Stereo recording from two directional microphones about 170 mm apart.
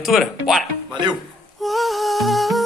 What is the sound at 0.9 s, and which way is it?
Speech, 25° right (ahead or behind).